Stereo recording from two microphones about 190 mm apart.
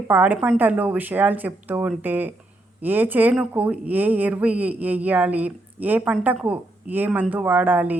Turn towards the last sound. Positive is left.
turn(degrees=-10)  # may be behind; listen again after turning